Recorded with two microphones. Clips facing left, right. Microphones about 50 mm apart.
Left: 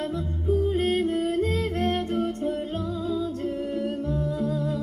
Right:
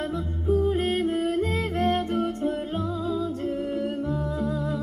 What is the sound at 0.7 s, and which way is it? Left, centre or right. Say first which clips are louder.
Music: even; centre.